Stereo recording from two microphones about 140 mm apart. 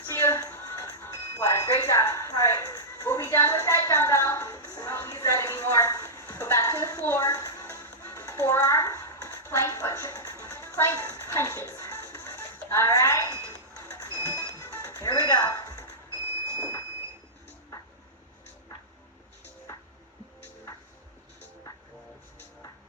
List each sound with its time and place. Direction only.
0.1 s music: 20° left (ahead or behind)
1.4 s a sound: 20° left (ahead or behind)
12.7 s music: 20° left (ahead or behind)